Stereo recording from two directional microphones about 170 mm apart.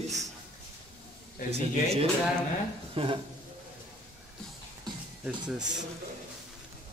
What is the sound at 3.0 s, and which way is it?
Speech, 30° right (ahead or behind).